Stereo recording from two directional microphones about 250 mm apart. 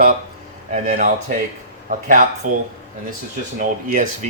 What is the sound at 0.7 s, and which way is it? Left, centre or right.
Speech, right.